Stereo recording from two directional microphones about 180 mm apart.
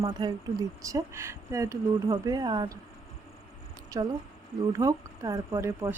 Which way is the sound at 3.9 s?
25° right (ahead or behind).